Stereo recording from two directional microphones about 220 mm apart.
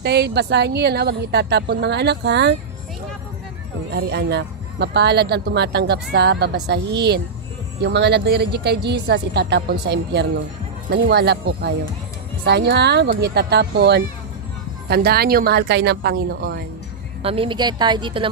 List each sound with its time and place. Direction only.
0.0 s speech: 50° right (ahead or behind)
3.9 s speech: 50° right (ahead or behind)
17.2 s a woman's voice: 25° right (ahead or behind)